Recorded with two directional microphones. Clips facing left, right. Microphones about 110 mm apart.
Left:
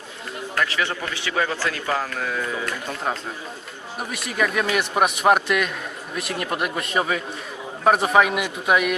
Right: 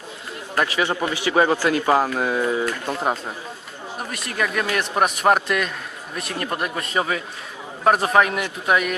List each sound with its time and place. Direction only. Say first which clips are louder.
0.5 s a man's voice: right 3 dB; 20° right (ahead or behind)
1.3 s speech: right 6 dB; 30° right (ahead or behind)
1.5 s a man's voice: right 6 dB; 15° right (ahead or behind)
2.1 s speech: right 6 dB; 25° right (ahead or behind)
4.1 s a man's voice: left 2 dB; centre (ahead or behind)